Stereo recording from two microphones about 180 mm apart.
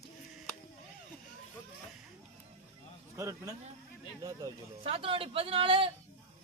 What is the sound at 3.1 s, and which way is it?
Speech, 15° right (ahead or behind).